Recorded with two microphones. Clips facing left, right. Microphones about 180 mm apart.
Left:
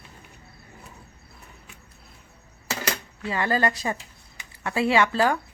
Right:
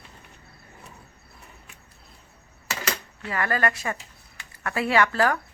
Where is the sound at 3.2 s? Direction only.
25° left (ahead or behind).